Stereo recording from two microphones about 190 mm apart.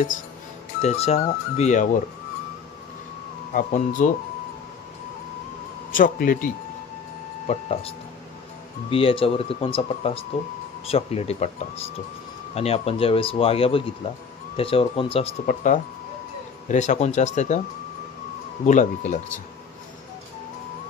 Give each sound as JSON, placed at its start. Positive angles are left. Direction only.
{"t": 0.8, "sound": "speech", "side_deg": 35}
{"t": 3.5, "sound": "speech", "side_deg": 45}
{"t": 5.9, "sound": "speech", "side_deg": 45}
{"t": 7.4, "sound": "speech", "side_deg": 35}
{"t": 8.9, "sound": "speech", "side_deg": 30}
{"t": 15.4, "sound": "speech", "side_deg": 45}
{"t": 18.7, "sound": "speech", "side_deg": 40}